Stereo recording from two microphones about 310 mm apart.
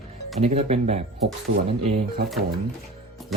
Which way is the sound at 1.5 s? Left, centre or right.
Right.